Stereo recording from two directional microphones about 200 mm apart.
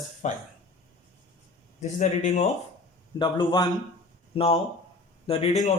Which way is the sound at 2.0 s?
35° left (ahead or behind).